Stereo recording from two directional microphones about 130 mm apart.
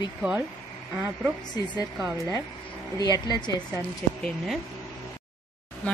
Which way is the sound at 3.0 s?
30° left (ahead or behind).